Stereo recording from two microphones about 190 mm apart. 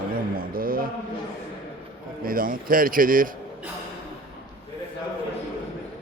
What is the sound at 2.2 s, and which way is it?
Speech, 50° right (ahead or behind).